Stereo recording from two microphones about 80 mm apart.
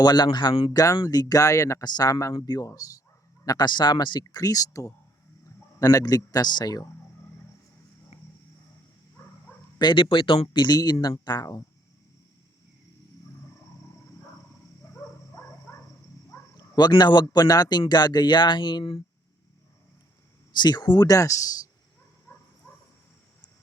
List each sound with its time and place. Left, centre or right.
0.0 s a man's voice: left
1.8 s a man's voice: left
4.4 s a man's voice: left
9.7 s a man's voice: left
14.9 s bow-wow: left
16.6 s a man's voice: left
20.6 s a man's voice: left
22.3 s dog: left